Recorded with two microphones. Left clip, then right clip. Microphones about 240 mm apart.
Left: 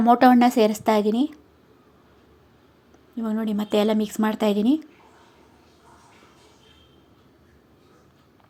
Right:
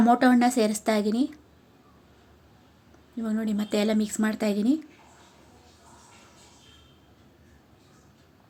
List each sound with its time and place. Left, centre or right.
0.0 s speech: centre
3.2 s speech: centre